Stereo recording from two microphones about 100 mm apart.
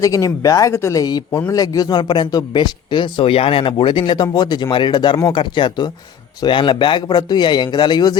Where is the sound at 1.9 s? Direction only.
50° left (ahead or behind).